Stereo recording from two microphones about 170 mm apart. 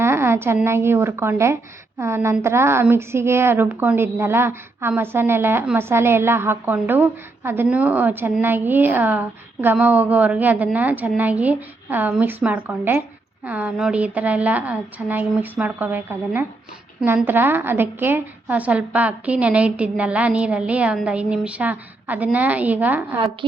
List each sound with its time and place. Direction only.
0.0 s a woman's voice: 15° right (ahead or behind)
23.4 s a woman's voice: 30° right (ahead or behind)